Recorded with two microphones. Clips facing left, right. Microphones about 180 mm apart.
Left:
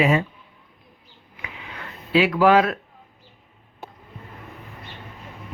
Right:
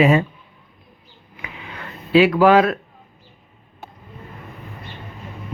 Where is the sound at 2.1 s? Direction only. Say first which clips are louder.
Right 5 dB; 65° right (ahead or behind).